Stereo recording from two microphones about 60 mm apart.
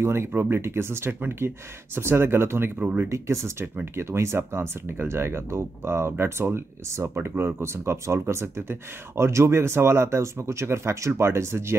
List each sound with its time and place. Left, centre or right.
0.0 s speech: right
2.8 s speech: right
3.1 s speech: right